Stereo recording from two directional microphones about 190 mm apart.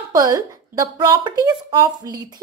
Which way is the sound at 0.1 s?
20° right (ahead or behind).